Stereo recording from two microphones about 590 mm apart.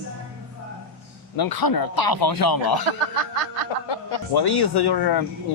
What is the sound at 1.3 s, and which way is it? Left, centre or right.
A man's voice, left.